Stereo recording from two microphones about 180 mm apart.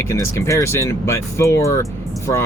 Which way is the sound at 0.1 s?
15° left (ahead or behind).